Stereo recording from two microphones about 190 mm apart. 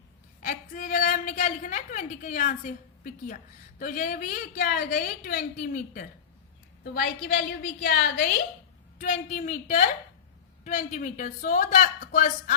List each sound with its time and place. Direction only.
0.4 s a woman's voice: 45° left (ahead or behind)
9.0 s a woman's voice: 40° left (ahead or behind)